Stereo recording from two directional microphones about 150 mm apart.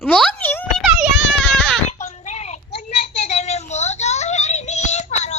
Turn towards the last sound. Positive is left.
turn(degrees=50)  # may be behind; listen again after turning